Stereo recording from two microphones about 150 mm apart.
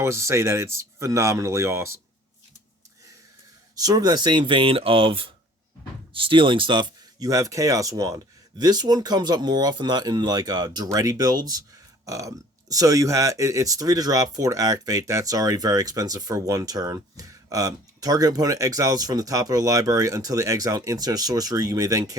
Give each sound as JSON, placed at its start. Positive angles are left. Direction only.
{"t": 0.0, "sound": "speech", "side_deg": -20}
{"t": 3.8, "sound": "speech", "side_deg": -25}